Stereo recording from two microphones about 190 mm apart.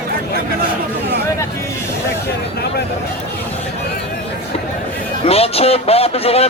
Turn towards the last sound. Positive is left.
turn(degrees=30)  # may be behind; listen again after turning